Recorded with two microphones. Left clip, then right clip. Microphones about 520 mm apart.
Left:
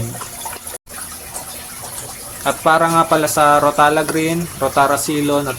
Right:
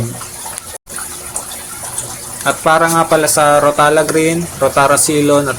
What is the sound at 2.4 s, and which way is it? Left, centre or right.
Speech, left.